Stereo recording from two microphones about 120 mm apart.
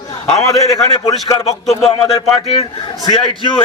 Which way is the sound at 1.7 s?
55° left (ahead or behind).